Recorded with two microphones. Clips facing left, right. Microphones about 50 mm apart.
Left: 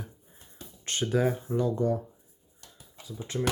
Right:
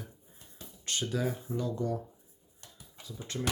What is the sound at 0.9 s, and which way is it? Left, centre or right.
Speech, left.